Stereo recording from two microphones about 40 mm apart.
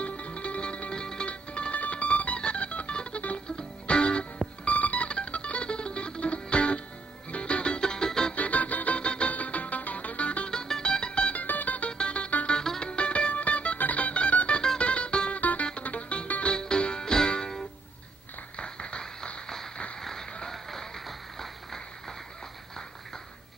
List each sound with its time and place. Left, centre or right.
0.0 s music: left
4.6 s music: left
7.8 s music: centre
8.4 s music: left
10.5 s music: centre
11.3 s music: left
12.0 s music: left
18.6 s clapping: left
19.4 s a sound: centre
20.3 s music: centre